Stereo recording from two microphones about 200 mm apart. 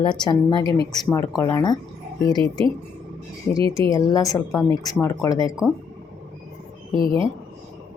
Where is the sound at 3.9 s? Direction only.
20° left (ahead or behind).